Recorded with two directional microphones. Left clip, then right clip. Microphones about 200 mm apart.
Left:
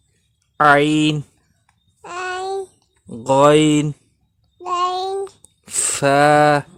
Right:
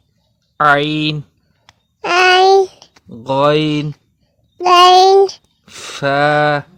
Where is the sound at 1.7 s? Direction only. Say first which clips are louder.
Right 17 dB; 40° right (ahead or behind).